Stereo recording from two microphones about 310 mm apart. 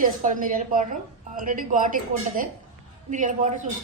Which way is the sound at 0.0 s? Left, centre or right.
Right.